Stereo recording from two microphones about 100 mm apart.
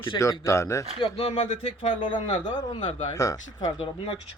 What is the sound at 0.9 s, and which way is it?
Speech, 70° left (ahead or behind).